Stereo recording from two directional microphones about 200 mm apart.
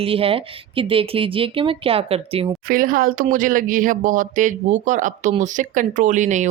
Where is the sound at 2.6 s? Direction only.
45° right (ahead or behind).